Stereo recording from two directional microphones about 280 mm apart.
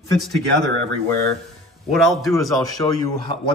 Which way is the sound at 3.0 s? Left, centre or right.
Centre.